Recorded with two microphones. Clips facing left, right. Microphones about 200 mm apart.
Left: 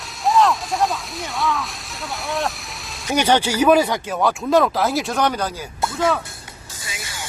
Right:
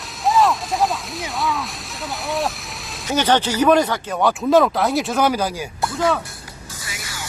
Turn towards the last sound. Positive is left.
turn(degrees=25)  # may be behind; listen again after turning